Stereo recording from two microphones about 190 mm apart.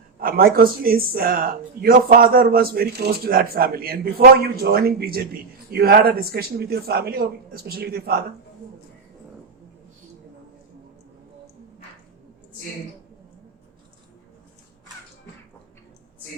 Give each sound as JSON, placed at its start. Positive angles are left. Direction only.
{"t": 0.2, "sound": "speech", "side_deg": -50}